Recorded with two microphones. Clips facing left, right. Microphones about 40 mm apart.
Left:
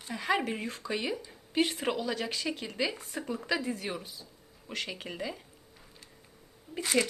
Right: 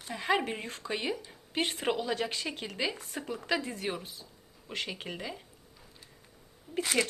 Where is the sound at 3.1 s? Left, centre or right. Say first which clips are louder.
Left 1 dB; centre.